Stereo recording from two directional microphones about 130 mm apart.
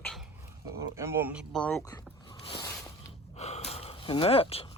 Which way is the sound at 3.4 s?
55° left (ahead or behind).